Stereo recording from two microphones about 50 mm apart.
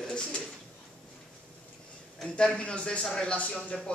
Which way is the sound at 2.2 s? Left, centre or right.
Left.